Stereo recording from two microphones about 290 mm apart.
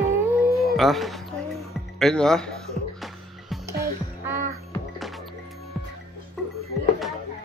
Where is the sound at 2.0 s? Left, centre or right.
Centre.